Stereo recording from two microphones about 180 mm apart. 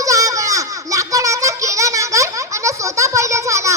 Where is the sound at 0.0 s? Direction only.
20° right (ahead or behind).